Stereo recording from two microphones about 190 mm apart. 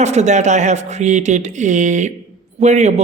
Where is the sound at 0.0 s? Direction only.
35° right (ahead or behind).